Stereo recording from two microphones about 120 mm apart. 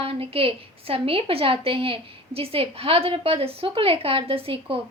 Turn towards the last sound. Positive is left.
turn(degrees=-50)  # may be behind; listen again after turning